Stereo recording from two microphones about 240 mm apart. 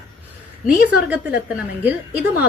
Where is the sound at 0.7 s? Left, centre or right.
Centre.